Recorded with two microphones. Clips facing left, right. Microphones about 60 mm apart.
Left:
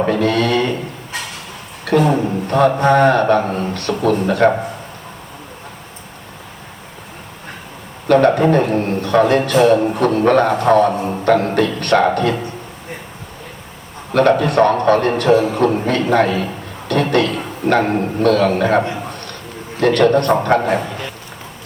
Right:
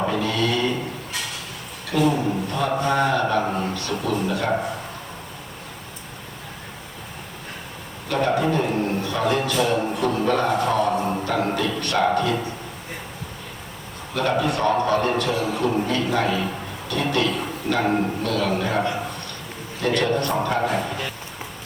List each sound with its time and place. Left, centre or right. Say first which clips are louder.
0.0 s a sound: left 7 dB; left
1.8 s a man's voice: left 6 dB; left
8.0 s a man's voice: left 9 dB; left
14.1 s a man's voice: left 9 dB; left